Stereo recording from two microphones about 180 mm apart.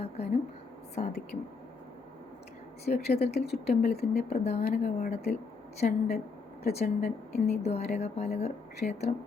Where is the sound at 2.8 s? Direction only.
35° left (ahead or behind).